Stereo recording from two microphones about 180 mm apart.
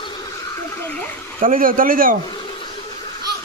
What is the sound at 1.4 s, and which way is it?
Speech, 50° right (ahead or behind).